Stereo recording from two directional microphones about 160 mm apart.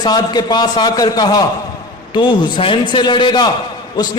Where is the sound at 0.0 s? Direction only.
25° left (ahead or behind).